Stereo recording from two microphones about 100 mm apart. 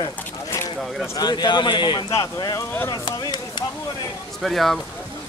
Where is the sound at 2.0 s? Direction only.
30° left (ahead or behind).